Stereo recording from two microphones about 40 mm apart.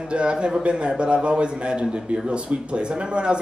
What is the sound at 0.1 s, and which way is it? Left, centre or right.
A man's voice, right.